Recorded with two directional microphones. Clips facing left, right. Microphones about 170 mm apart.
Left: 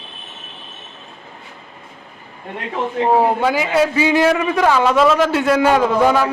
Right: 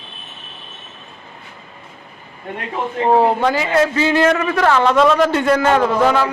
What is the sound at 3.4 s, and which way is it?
A man's voice, 10° left (ahead or behind).